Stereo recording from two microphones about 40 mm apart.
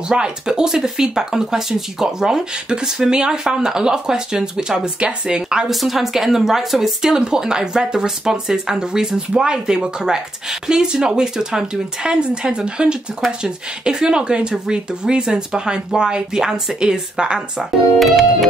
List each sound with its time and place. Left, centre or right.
0.1 s speech: centre
5.7 s speech: centre; by 17.6 s right
17.9 s music: centre